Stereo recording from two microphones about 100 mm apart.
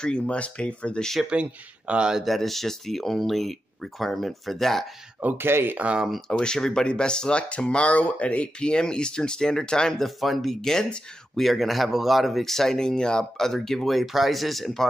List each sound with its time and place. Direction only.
0.0 s speech: 10° left (ahead or behind)
1.2 s speech: 10° right (ahead or behind)
5.2 s speech: 20° right (ahead or behind)
6.0 s speech: centre (ahead or behind)